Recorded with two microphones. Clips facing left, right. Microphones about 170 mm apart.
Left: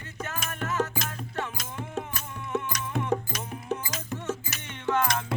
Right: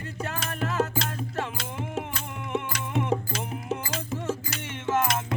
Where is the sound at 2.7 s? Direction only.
25° right (ahead or behind).